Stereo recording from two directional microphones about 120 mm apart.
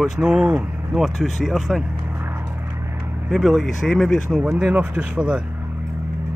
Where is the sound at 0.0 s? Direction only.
5° right (ahead or behind).